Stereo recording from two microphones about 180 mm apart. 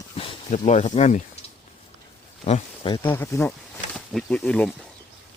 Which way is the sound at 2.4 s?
35° left (ahead or behind).